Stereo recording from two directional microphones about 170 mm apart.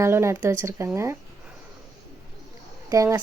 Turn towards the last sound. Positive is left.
turn(degrees=-20)  # may be behind; listen again after turning